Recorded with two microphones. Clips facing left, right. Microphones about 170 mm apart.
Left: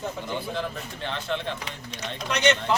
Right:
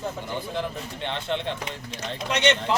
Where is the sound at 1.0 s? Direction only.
25° right (ahead or behind).